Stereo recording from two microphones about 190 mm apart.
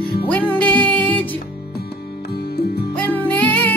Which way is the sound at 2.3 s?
55° left (ahead or behind).